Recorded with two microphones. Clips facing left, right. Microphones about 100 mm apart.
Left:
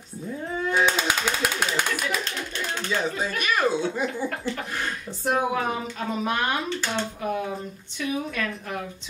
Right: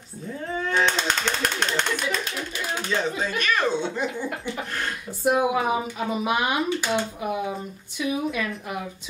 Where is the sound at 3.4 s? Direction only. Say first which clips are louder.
Left 1 dB; 10° left (ahead or behind).